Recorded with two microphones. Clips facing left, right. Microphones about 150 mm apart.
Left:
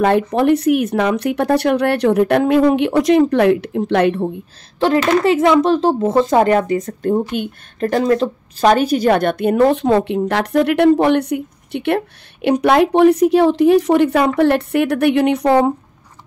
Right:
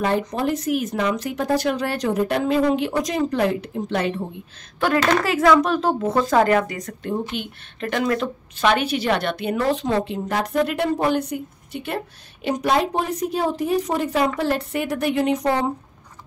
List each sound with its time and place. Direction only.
0.3 s speech: 65° left (ahead or behind)
4.7 s a child's voice: 25° left (ahead or behind)
7.0 s a woman's voice: 45° left (ahead or behind); by 15.7 s 70° left (ahead or behind)